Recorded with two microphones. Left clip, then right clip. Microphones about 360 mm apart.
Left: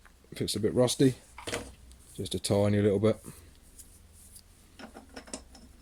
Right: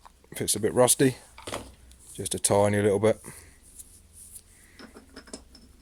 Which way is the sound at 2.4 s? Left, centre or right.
Centre.